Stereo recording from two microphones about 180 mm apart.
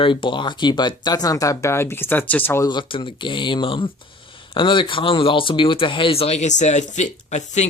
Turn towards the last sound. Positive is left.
turn(degrees=40)  # may be behind; listen again after turning